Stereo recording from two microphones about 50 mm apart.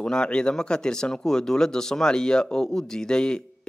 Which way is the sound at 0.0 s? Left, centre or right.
Centre.